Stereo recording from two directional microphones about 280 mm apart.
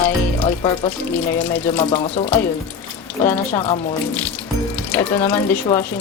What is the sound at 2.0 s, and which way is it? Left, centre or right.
Speech, left.